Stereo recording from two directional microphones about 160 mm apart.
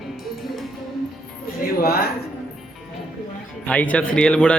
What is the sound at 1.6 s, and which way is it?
Speech, 70° left (ahead or behind).